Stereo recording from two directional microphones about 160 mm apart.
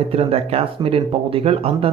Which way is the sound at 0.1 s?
40° right (ahead or behind).